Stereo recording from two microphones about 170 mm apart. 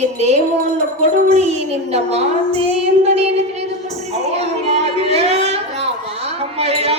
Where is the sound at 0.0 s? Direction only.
40° right (ahead or behind).